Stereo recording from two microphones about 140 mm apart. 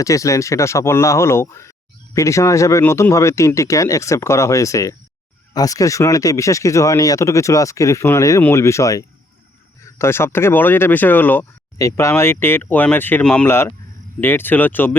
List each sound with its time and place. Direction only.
0.0 s speech: 20° left (ahead or behind)